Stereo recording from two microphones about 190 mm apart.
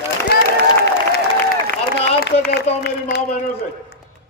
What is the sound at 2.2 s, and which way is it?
Speech, 60° left (ahead or behind).